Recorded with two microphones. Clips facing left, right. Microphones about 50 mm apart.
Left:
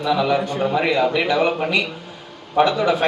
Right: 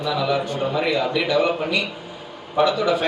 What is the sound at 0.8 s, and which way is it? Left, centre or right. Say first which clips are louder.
A man's voice: left 2 dB; left.